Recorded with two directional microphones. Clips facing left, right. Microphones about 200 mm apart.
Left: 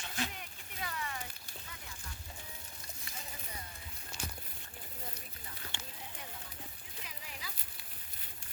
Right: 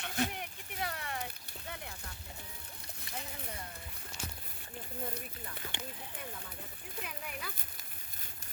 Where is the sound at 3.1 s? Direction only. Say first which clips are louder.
Right 6 dB; 65° right (ahead or behind).